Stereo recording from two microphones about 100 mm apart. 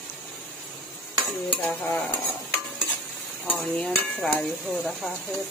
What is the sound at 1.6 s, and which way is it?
Stir, 15° left (ahead or behind).